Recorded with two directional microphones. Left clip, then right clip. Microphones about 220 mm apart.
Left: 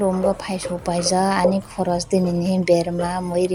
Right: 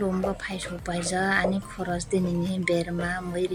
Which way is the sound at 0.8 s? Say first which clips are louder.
Left 9 dB; 5° right (ahead or behind).